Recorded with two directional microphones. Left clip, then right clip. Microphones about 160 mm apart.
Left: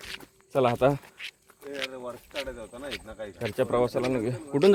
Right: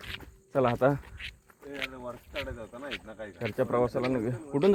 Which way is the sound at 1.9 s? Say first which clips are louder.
Left 3 dB; 85° left.